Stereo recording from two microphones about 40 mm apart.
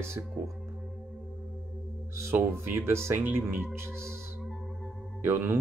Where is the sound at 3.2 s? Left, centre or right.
Right.